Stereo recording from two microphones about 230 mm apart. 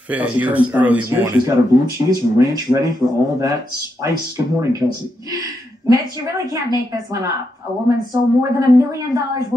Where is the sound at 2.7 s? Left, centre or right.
Centre.